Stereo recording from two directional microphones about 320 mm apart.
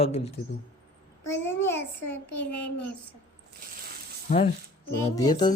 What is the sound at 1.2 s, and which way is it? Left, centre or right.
Child singing, centre.